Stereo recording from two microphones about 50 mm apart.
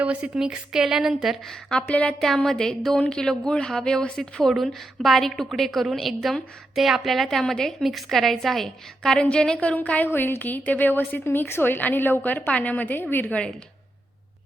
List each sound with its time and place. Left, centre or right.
0.0 s speech: right
0.3 s a woman's voice: centre
1.9 s a woman's voice: left
2.2 s a woman's voice: centre
9.7 s a woman's voice: left
10.1 s a woman's voice: left